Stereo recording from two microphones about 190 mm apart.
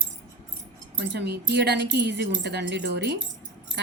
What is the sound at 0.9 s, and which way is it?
Speech, 65° right (ahead or behind).